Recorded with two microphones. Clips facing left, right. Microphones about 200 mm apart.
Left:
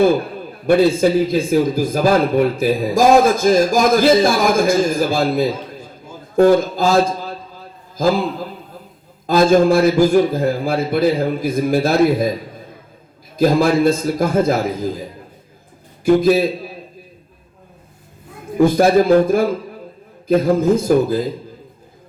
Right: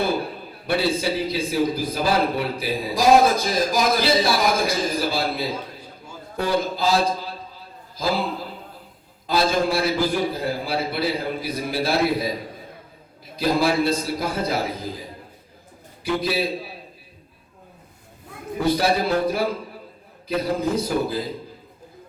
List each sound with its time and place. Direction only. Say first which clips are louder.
0.7 s a man's voice: left 10 dB; 50° left (ahead or behind)
13.3 s a man's voice: left 6 dB; 45° left (ahead or behind)
16.0 s a man's voice: left 11 dB; 50° left (ahead or behind)
18.6 s a man's voice: left 9 dB; 50° left (ahead or behind)